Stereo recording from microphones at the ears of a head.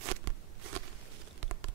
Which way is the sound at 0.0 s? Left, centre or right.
Right.